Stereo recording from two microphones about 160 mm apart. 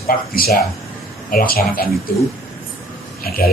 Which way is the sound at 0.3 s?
70° left (ahead or behind).